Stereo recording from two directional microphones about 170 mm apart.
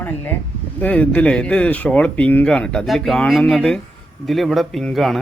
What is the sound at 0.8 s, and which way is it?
Speech, 10° left (ahead or behind).